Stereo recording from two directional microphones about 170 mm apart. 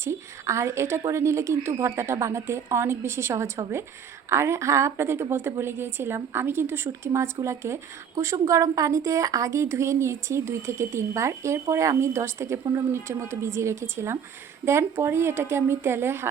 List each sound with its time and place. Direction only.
0.0 s a woman's voice: 15° right (ahead or behind)